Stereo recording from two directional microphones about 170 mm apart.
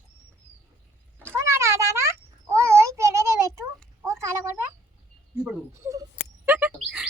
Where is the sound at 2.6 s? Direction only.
15° right (ahead or behind).